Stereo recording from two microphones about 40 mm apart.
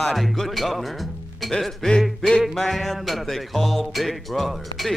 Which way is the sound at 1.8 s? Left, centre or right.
Centre.